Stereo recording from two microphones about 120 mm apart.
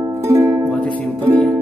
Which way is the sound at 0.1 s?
25° right (ahead or behind).